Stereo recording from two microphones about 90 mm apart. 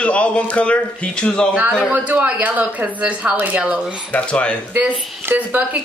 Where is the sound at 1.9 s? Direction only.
15° right (ahead or behind).